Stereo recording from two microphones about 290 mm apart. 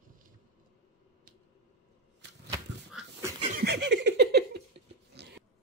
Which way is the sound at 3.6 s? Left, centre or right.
Right.